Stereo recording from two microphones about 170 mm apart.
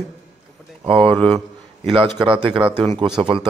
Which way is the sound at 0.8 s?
30° right (ahead or behind).